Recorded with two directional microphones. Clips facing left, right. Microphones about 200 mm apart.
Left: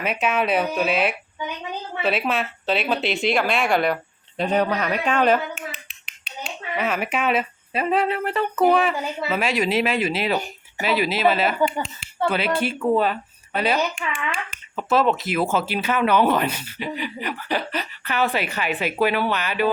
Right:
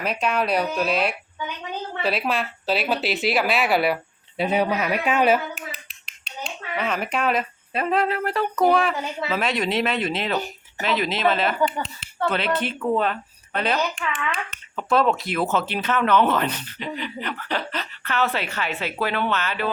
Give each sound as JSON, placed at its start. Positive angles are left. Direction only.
{"t": 0.0, "sound": "speech", "side_deg": 5}
{"t": 6.2, "sound": "speech", "side_deg": 5}
{"t": 14.1, "sound": "a child's voice", "side_deg": 30}
{"t": 14.8, "sound": "speech", "side_deg": 5}